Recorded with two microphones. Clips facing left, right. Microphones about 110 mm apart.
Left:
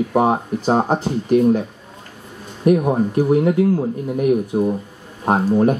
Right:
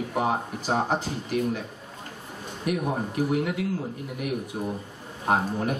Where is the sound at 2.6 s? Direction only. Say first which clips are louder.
Left 12 dB; 40° left (ahead or behind).